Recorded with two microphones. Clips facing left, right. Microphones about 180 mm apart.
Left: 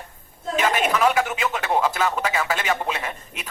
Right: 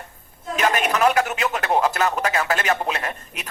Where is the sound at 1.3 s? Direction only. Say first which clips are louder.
Right 1 dB; 15° right (ahead or behind).